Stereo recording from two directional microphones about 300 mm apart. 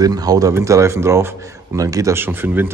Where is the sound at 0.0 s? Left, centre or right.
Centre.